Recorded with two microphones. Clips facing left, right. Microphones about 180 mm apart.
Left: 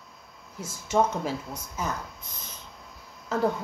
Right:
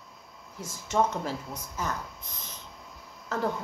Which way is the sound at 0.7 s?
5° left (ahead or behind).